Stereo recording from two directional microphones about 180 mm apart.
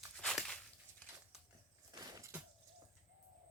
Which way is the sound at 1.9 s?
20° right (ahead or behind).